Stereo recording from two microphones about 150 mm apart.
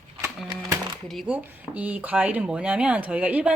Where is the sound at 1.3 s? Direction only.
10° right (ahead or behind).